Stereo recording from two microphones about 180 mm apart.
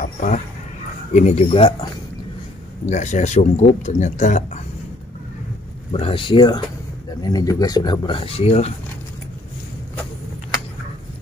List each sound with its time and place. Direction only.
0.0 s a sound: 45° left (ahead or behind)
1.1 s speech: 40° left (ahead or behind)
2.9 s speech: 40° left (ahead or behind)
5.9 s speech: 30° left (ahead or behind)